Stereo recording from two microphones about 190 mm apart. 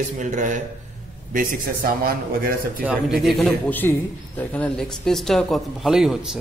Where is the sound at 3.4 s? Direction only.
10° left (ahead or behind).